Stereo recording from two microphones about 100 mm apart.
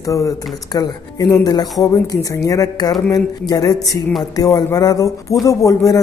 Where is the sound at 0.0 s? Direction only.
30° left (ahead or behind).